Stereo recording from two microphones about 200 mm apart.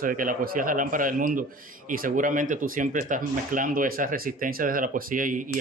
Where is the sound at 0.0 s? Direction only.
40° right (ahead or behind).